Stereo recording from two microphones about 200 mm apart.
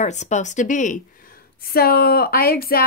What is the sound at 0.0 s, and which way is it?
Speech, 35° left (ahead or behind).